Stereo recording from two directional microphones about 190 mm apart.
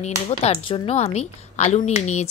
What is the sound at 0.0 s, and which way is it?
Speech, 30° left (ahead or behind).